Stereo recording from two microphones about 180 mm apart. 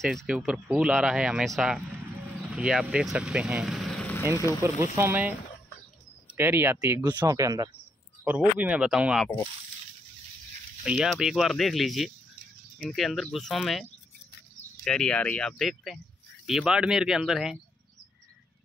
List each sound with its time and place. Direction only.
0.0 s speech: centre (ahead or behind)
4.9 s speech: 10° right (ahead or behind)
6.3 s speech: 15° right (ahead or behind)
10.8 s speech: 5° right (ahead or behind)
14.9 s speech: 5° left (ahead or behind)